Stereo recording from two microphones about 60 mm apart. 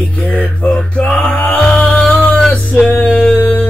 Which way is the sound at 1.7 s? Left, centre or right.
Left.